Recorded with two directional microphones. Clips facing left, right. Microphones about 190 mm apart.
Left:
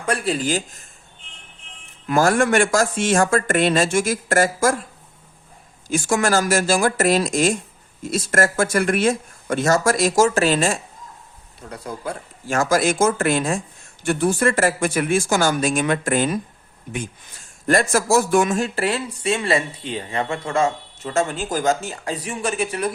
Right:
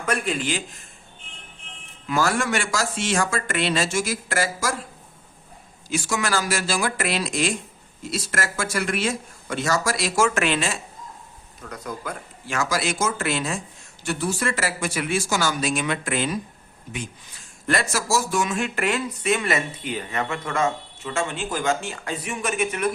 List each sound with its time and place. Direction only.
0.0 s speech: 35° left (ahead or behind)
2.0 s speech: 50° left (ahead or behind)
5.9 s speech: 50° left (ahead or behind)
11.6 s speech: 30° left (ahead or behind)
12.5 s speech: 50° left (ahead or behind)
18.5 s speech: 35° left (ahead or behind)